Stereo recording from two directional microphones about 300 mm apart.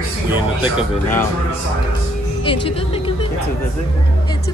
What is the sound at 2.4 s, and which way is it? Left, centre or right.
Speech, centre.